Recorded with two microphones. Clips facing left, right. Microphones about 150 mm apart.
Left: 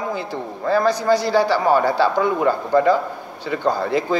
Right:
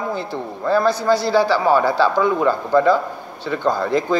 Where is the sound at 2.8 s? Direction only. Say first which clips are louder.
Right 1 dB; 15° left (ahead or behind).